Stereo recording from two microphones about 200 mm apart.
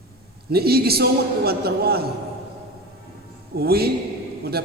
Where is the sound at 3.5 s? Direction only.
50° right (ahead or behind).